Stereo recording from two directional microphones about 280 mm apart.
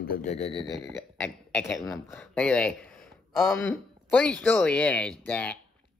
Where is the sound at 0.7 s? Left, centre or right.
Centre.